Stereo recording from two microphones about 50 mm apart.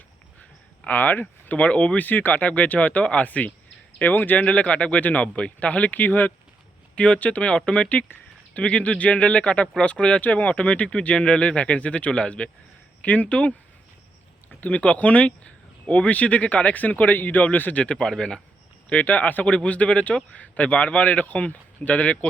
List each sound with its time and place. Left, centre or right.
0.9 s speech: left
2.0 s speech: left
4.4 s speech: left
6.9 s speech: left
14.6 s speech: left
17.9 s speech: centre
18.9 s speech: left